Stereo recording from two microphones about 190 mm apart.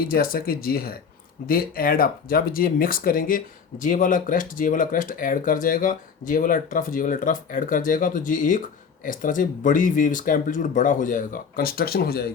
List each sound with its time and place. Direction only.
0.0 s speech: 50° left (ahead or behind)